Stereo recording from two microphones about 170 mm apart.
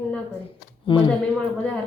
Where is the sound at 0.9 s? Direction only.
30° left (ahead or behind).